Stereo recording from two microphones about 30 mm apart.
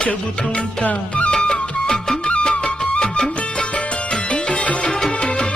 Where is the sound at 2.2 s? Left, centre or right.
Left.